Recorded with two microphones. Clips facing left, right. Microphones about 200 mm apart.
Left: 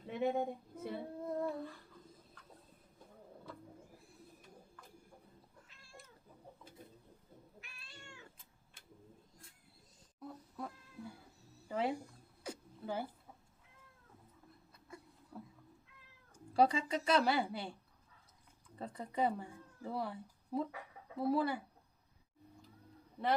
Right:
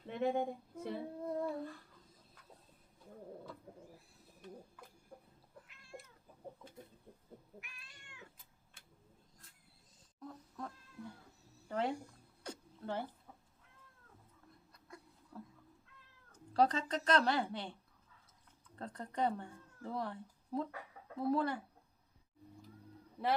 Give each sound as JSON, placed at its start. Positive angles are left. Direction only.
{"t": 0.1, "sound": "child singing", "side_deg": 5}
{"t": 7.6, "sound": "cat", "side_deg": 30}
{"t": 10.2, "sound": "cat", "side_deg": 5}
{"t": 11.7, "sound": "a sound", "side_deg": 5}
{"t": 14.8, "sound": "a sound", "side_deg": 5}
{"t": 16.3, "sound": "speech", "side_deg": 10}
{"t": 18.8, "sound": "a woman's voice", "side_deg": 5}